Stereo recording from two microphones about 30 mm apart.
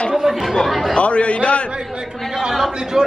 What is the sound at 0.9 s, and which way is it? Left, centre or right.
Speech, left.